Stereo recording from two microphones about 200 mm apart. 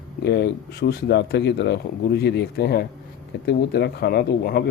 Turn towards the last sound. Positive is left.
turn(degrees=50)  # may be behind; listen again after turning